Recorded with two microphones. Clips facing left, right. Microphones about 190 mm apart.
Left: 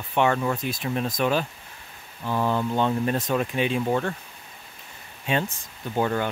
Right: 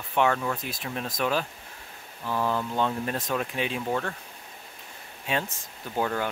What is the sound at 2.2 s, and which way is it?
Speech, 25° left (ahead or behind).